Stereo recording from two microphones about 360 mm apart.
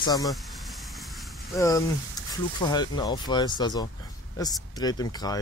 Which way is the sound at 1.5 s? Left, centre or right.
Centre.